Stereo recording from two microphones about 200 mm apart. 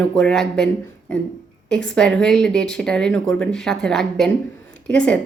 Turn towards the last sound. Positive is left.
turn(degrees=5)  # may be behind; listen again after turning